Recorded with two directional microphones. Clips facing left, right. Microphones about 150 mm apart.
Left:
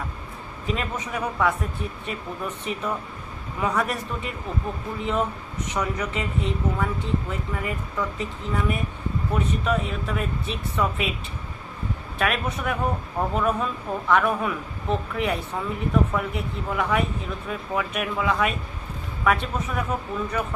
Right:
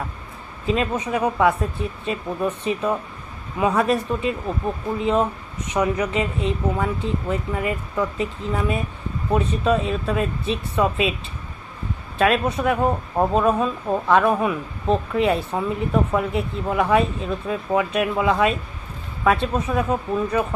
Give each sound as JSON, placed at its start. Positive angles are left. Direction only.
{"t": 0.7, "sound": "speech", "side_deg": -25}
{"t": 12.2, "sound": "speech", "side_deg": -25}